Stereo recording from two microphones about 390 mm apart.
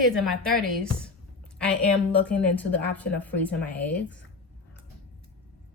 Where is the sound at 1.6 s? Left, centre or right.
Centre.